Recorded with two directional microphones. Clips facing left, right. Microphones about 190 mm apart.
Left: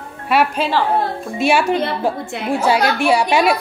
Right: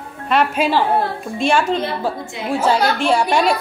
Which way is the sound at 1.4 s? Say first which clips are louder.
Left 1 dB; 10° left (ahead or behind).